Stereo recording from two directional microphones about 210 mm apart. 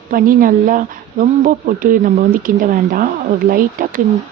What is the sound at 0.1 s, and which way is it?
Speech, 40° right (ahead or behind).